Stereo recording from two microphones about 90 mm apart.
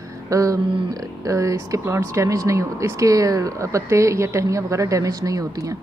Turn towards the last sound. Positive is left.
turn(degrees=-40)  # may be behind; listen again after turning